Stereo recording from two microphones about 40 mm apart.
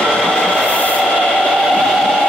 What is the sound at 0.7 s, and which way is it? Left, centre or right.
Train, left.